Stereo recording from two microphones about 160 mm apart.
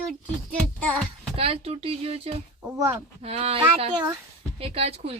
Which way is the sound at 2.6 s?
15° right (ahead or behind).